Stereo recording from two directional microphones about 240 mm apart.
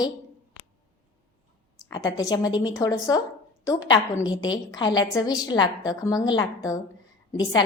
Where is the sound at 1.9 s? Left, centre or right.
Centre.